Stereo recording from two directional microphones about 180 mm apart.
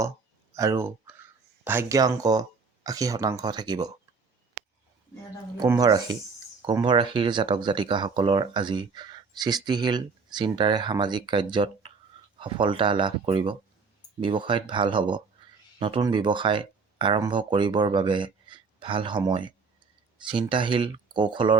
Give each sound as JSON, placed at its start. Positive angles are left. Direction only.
{"t": 0.5, "sound": "speech", "side_deg": -15}
{"t": 5.5, "sound": "speech", "side_deg": -20}